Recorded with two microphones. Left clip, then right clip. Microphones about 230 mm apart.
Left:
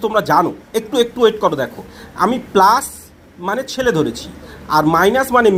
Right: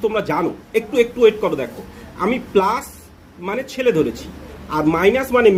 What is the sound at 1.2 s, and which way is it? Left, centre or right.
Speech, left.